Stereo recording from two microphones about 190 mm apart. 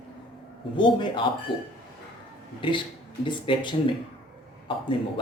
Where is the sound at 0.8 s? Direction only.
25° left (ahead or behind).